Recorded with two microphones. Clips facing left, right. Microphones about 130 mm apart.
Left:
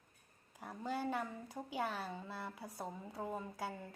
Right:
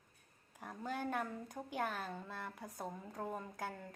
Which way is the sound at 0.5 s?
5° left (ahead or behind).